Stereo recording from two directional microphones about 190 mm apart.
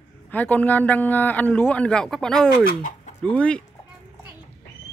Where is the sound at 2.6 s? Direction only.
45° left (ahead or behind).